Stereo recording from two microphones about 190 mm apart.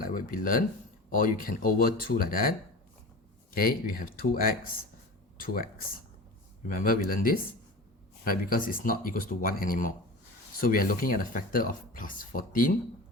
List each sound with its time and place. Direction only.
0.0 s speech: 45° left (ahead or behind)
6.7 s speech: 50° left (ahead or behind)